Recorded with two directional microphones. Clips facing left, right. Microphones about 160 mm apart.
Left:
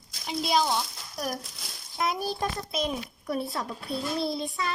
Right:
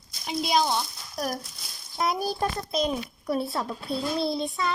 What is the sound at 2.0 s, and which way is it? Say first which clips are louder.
A child's voice: right 2 dB; 35° right (ahead or behind).